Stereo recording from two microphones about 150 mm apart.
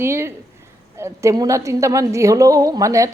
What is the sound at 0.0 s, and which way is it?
A woman's voice, 15° right (ahead or behind).